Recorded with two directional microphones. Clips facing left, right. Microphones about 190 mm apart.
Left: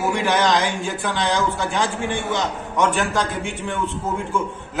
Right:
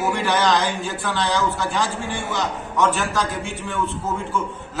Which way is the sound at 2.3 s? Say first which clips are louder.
Left 2 dB; 20° left (ahead or behind).